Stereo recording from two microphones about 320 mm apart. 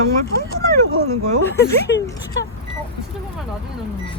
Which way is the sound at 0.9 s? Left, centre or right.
Right.